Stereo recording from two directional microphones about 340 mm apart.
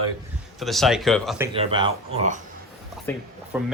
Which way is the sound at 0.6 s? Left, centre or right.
Centre.